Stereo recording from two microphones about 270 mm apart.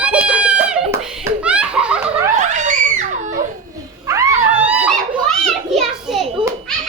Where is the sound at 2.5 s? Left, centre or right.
Right.